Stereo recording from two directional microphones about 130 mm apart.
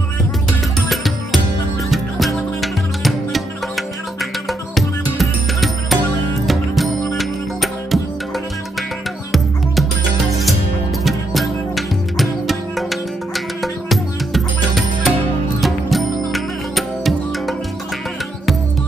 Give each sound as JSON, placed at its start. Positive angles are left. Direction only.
{"t": 0.5, "sound": "music", "side_deg": 0}
{"t": 11.1, "sound": "music", "side_deg": 0}